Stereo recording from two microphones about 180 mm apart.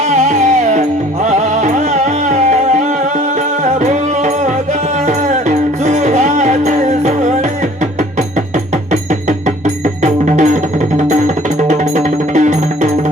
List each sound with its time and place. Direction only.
0.1 s music: 40° right (ahead or behind)
9.6 s music: 40° right (ahead or behind)